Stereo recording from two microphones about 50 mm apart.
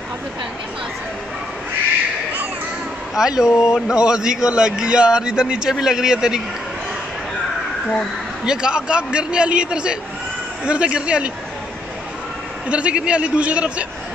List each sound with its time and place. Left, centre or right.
3.2 s a man's voice: centre
8.5 s a man's voice: centre
12.6 s a man's voice: right